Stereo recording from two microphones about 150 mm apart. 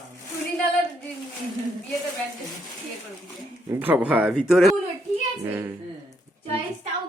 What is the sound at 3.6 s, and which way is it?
Speech, 15° right (ahead or behind).